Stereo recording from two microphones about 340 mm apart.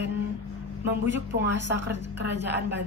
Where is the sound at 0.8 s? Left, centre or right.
Right.